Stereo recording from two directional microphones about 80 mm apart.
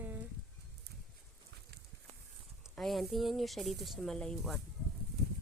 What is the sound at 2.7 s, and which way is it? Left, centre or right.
Speech, centre.